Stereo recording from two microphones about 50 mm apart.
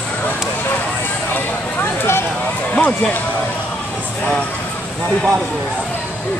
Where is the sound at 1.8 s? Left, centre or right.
Left.